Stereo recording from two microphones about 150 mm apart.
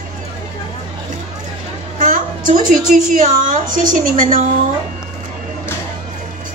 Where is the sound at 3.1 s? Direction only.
60° right (ahead or behind).